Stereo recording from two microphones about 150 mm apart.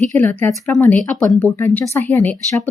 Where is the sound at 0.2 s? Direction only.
10° left (ahead or behind).